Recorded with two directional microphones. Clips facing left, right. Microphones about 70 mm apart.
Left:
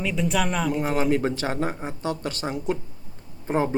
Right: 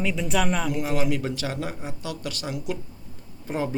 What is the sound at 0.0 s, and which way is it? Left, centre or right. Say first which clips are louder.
Speech: even; centre.